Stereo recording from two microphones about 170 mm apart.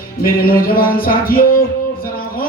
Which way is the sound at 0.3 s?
60° left (ahead or behind).